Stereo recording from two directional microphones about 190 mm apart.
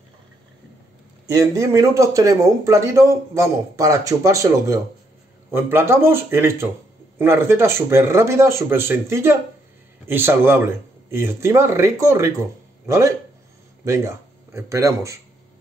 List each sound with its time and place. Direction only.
1.2 s speech: 15° right (ahead or behind)